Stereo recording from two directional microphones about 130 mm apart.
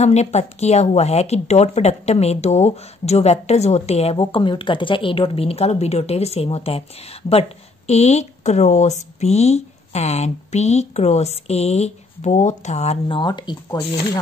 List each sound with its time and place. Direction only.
0.0 s speech: 55° left (ahead or behind)
13.2 s speech: 35° left (ahead or behind)